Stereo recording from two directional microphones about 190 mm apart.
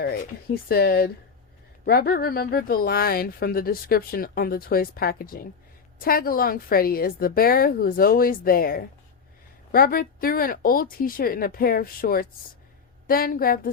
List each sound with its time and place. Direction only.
0.7 s speech: 55° left (ahead or behind)